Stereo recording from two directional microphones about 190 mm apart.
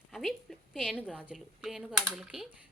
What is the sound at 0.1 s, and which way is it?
A woman's voice, centre (ahead or behind).